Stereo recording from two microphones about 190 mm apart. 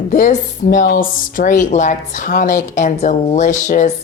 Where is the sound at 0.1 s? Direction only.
45° left (ahead or behind).